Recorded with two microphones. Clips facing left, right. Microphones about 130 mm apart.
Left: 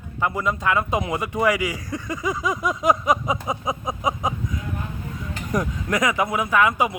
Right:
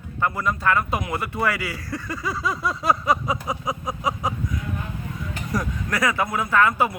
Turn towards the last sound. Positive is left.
turn(degrees=15)  # may be behind; listen again after turning